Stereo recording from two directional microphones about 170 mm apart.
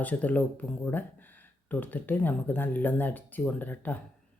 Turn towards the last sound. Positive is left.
turn(degrees=10)  # may be behind; listen again after turning